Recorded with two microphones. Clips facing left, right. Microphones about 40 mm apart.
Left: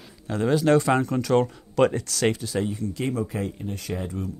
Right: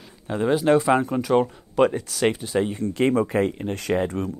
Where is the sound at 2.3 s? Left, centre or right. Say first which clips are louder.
Right 3 dB; right.